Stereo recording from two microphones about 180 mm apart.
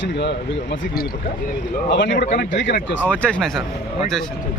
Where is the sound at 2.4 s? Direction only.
85° left.